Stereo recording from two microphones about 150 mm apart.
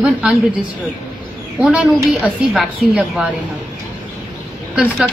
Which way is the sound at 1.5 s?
Centre (ahead or behind).